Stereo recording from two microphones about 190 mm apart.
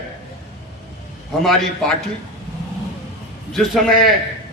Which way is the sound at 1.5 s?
Centre (ahead or behind).